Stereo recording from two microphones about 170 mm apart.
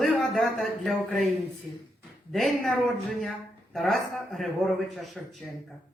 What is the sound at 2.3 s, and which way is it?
A man's voice, centre (ahead or behind).